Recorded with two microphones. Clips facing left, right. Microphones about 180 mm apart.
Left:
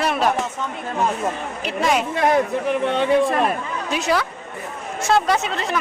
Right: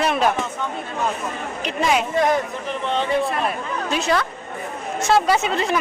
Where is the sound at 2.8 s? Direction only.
55° left (ahead or behind).